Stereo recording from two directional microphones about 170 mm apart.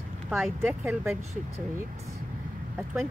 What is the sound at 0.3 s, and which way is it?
Speech, centre (ahead or behind).